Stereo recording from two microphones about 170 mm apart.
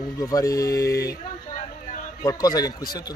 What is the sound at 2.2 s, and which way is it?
Speech, 20° left (ahead or behind).